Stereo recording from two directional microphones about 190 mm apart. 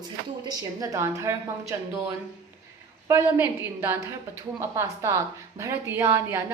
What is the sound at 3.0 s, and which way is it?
A woman's voice, 15° right (ahead or behind).